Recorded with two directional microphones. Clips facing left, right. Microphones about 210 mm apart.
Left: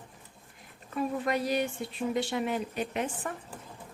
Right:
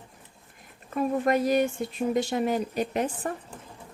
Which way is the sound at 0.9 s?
45° right (ahead or behind).